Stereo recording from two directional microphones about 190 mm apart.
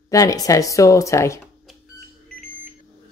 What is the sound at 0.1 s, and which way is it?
Speech, 20° left (ahead or behind).